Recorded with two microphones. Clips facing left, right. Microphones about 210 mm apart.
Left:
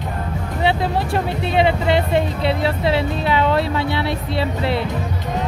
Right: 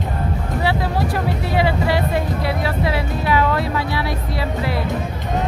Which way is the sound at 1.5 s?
25° left (ahead or behind).